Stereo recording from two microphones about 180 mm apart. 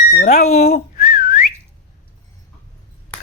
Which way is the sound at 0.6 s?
55° left (ahead or behind).